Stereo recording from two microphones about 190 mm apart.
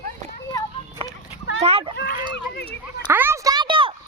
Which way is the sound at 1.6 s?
30° right (ahead or behind).